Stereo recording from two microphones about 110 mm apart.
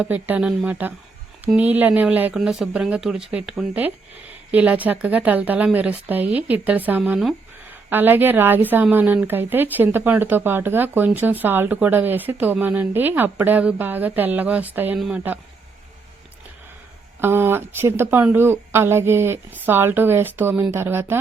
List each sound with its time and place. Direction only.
0.0 s speech: 15° right (ahead or behind)
2.3 s speech: 5° right (ahead or behind)
14.9 s speech: centre (ahead or behind)
17.2 s speech: 20° right (ahead or behind)